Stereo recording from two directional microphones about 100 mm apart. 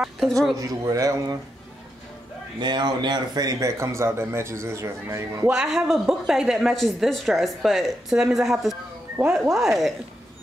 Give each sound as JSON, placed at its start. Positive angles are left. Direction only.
{"t": 0.6, "sound": "speech", "side_deg": -35}
{"t": 2.6, "sound": "speech", "side_deg": -50}
{"t": 5.5, "sound": "a woman's voice", "side_deg": -5}